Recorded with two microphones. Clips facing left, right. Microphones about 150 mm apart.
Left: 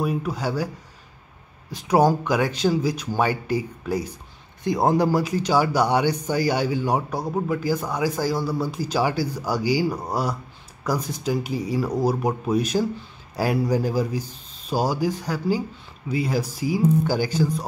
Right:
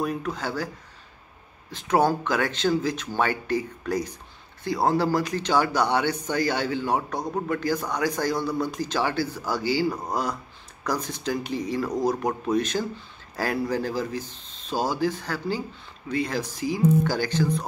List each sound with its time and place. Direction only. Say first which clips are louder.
0.0 s a man's voice: left 3 dB; 10° left (ahead or behind)
1.7 s a man's voice: left 3 dB; 10° left (ahead or behind)